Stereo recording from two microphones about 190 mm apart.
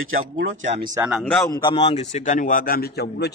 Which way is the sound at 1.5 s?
25° left (ahead or behind).